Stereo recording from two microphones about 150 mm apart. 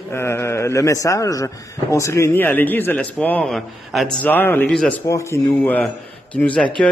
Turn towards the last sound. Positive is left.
turn(degrees=5)  # may be behind; listen again after turning